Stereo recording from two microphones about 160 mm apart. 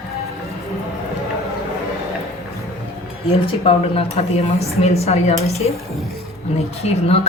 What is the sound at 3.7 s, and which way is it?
A woman's voice, 35° left (ahead or behind).